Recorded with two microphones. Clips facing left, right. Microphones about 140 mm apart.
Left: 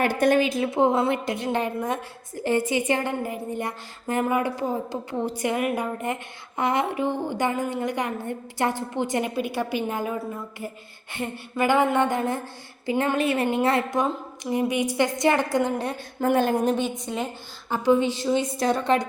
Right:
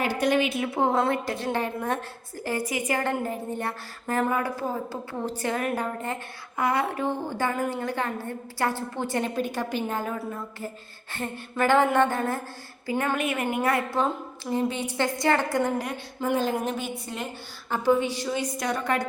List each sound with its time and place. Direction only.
0.0 s a woman's voice: 55° left (ahead or behind); by 0.7 s 35° left (ahead or behind)
0.7 s a woman's voice: 20° left (ahead or behind)
2.5 s a woman's voice: 25° left (ahead or behind)
3.0 s a woman's voice: 15° left (ahead or behind)
13.1 s a woman's voice: 30° left (ahead or behind)
14.5 s a woman's voice: 15° left (ahead or behind)
16.2 s speech: 60° left (ahead or behind)
17.7 s a woman's voice: 15° left (ahead or behind)